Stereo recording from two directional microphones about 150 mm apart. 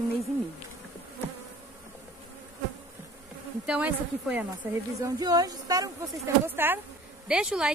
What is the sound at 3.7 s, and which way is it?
Speech, 10° right (ahead or behind).